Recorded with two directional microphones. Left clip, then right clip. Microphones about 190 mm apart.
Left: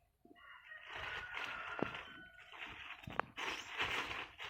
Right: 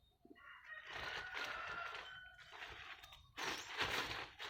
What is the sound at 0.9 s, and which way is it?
Music, 10° left (ahead or behind).